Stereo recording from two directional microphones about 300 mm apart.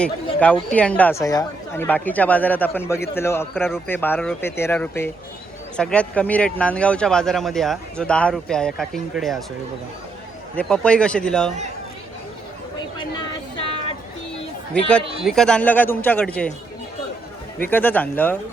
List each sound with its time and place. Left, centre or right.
0.7 s speech: centre
10.6 s speech: centre
13.6 s a sound: centre
14.8 s speech: centre
17.6 s speech: centre